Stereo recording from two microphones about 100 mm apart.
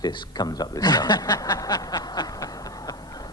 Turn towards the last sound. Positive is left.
turn(degrees=40)  # may be behind; listen again after turning